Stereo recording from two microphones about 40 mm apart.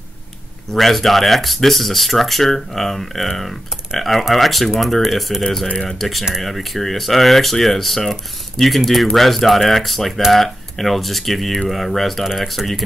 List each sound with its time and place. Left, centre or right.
0.7 s speech: centre
5.4 s speech: centre